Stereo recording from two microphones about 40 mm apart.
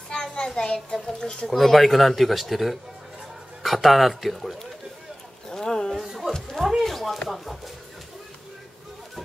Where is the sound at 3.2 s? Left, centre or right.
Centre.